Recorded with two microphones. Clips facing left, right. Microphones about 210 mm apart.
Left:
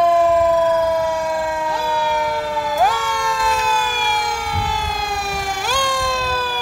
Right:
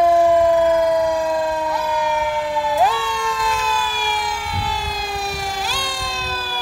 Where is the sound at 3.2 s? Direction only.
45° left (ahead or behind).